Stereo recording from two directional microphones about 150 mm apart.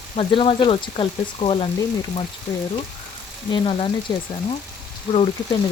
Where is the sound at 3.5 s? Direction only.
35° left (ahead or behind).